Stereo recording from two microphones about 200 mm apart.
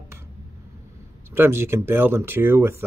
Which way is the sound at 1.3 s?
10° right (ahead or behind).